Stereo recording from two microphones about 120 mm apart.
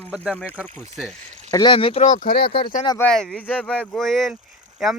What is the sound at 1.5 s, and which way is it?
Speech, 40° left (ahead or behind).